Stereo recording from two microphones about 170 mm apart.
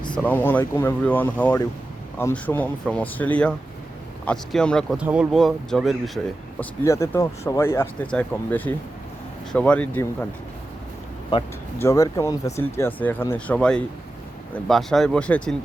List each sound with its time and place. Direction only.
0.2 s speech: 10° left (ahead or behind)
6.6 s speech: 15° left (ahead or behind)
11.3 s speech: 25° left (ahead or behind); by 15.5 s 5° left (ahead or behind)